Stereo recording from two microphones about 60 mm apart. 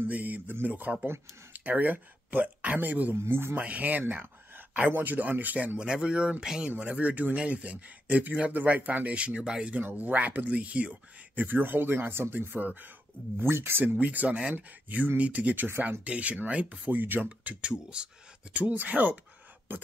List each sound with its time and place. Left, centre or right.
0.0 s speech: right
1.0 s speech: right
1.6 s speech: right
3.2 s speech: right
3.5 s speech: right
5.8 s speech: centre
6.7 s speech: right
13.4 s speech: right
13.8 s speech: right
18.5 s speech: right